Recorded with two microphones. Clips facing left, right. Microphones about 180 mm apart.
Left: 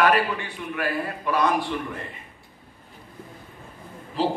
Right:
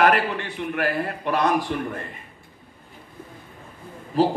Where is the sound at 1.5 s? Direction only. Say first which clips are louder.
Right 2 dB; 40° right (ahead or behind).